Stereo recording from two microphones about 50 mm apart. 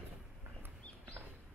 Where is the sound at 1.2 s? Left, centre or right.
Right.